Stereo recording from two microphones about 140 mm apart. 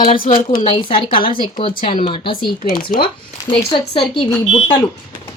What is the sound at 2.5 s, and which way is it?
Speech, 90° left.